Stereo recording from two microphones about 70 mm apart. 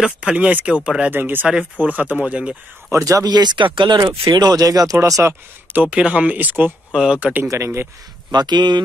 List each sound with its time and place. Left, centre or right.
0.0 s speech: centre
1.1 s speech: right
2.9 s speech: right
3.3 s speech: right
5.0 s speech: right
5.8 s speech: centre
6.9 s speech: centre
7.4 s speech: right
8.3 s speech: right